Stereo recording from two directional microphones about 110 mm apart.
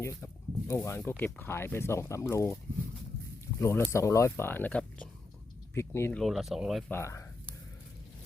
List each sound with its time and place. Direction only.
0.0 s speech: 25° left (ahead or behind)
3.6 s speech: 25° left (ahead or behind)
5.7 s speech: 25° left (ahead or behind)
6.1 s speech: centre (ahead or behind)
6.9 s speech: 25° left (ahead or behind)